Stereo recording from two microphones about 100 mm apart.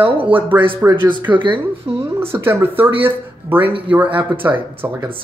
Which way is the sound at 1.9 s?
20° right (ahead or behind).